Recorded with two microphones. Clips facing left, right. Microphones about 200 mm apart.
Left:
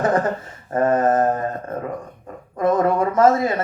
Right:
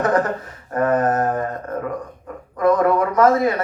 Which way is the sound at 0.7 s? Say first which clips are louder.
Left 1 dB; 25° left (ahead or behind).